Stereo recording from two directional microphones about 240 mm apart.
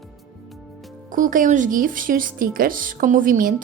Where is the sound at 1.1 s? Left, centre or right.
Right.